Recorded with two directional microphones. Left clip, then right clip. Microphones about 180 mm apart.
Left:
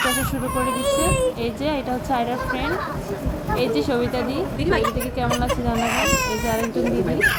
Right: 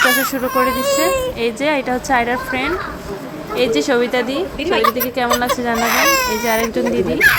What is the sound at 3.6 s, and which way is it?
Speech, 15° right (ahead or behind).